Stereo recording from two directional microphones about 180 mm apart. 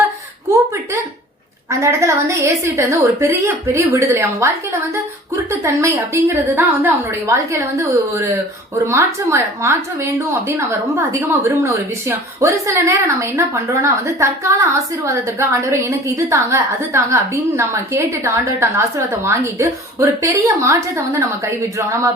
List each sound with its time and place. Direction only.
1.7 s a woman's voice: 15° right (ahead or behind)